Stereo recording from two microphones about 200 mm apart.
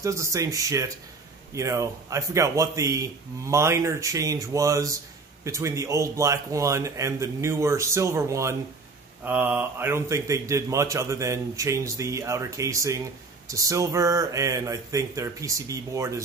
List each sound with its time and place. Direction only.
0.0 s a man's voice: 15° right (ahead or behind)